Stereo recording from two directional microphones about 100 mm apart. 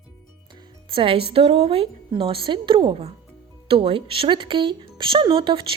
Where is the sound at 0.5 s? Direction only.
60° right (ahead or behind).